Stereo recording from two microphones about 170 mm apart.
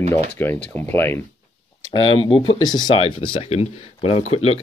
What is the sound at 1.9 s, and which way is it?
Speech, 30° left (ahead or behind).